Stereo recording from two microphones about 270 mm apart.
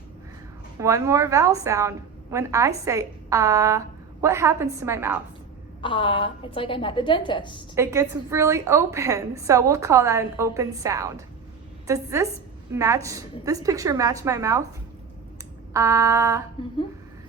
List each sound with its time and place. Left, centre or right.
0.8 s a woman's voice: centre
5.8 s a woman's voice: centre
7.8 s a woman's voice: centre
15.7 s a woman's voice: centre